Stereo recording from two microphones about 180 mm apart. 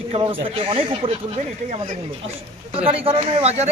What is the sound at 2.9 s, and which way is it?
Speech, 30° right (ahead or behind).